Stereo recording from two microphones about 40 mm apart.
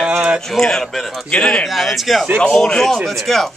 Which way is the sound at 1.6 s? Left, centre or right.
Centre.